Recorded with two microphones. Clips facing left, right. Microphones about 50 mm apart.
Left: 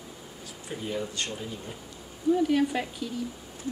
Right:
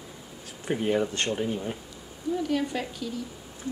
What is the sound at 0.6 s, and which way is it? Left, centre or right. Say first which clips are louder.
Speech: right 8 dB; right.